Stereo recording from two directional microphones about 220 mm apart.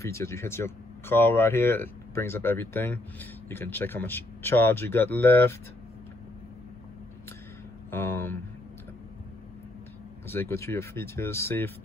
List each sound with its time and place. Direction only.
0.0 s speech: 15° left (ahead or behind)
7.9 s a sound: 10° left (ahead or behind)
10.2 s speech: 10° left (ahead or behind)